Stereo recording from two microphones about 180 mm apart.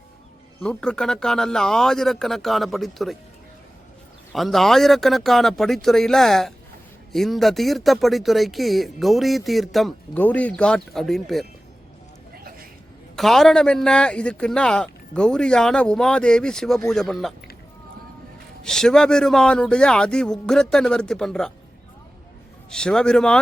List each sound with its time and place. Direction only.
0.6 s speech: 5° left (ahead or behind)
4.3 s speech: centre (ahead or behind)
12.3 s a sound: 55° right (ahead or behind)
13.1 s speech: centre (ahead or behind)
18.6 s speech: 5° left (ahead or behind)
22.7 s speech: 5° left (ahead or behind)